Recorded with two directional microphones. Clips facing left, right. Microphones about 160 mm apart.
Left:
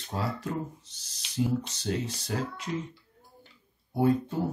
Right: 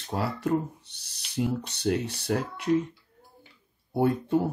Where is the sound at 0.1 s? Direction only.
65° right (ahead or behind).